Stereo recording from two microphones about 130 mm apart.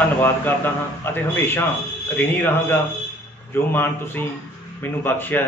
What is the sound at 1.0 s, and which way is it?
A man's voice, 15° left (ahead or behind).